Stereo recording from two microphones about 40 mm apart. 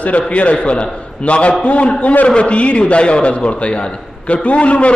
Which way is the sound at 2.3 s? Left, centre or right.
Left.